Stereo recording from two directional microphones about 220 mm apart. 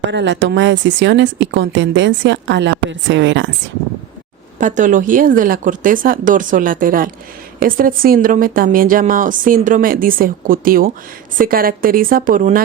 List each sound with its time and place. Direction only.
0.1 s speech: 55° right (ahead or behind)
4.5 s a woman's voice: 35° right (ahead or behind)